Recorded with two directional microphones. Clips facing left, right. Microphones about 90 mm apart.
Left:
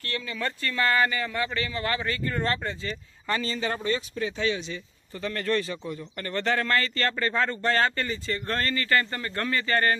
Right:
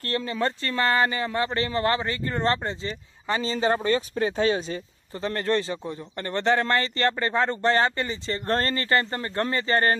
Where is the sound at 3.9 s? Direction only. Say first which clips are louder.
Right 4 dB; 45° right (ahead or behind).